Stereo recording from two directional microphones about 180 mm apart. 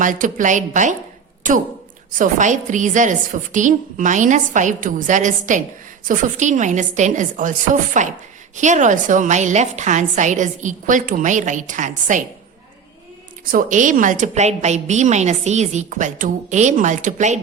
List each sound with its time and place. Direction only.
0.0 s a woman's voice: 45° right (ahead or behind)
2.1 s a woman's voice: 45° right (ahead or behind)
13.4 s a woman's voice: 50° right (ahead or behind)